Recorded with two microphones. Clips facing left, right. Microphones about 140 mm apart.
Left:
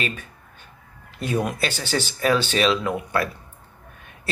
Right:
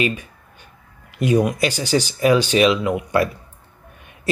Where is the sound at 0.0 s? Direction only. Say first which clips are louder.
Right 7 dB; 15° right (ahead or behind).